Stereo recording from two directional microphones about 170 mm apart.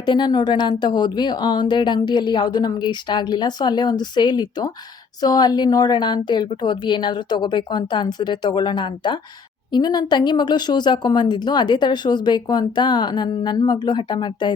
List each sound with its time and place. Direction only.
0.0 s a woman's voice: 25° left (ahead or behind)